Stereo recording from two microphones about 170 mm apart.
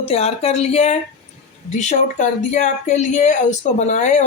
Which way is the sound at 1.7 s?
45° left (ahead or behind).